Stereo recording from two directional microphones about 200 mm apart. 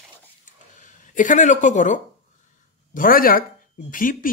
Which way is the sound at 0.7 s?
40° left (ahead or behind).